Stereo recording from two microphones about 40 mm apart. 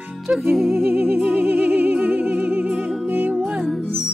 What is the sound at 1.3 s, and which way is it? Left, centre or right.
Music, right.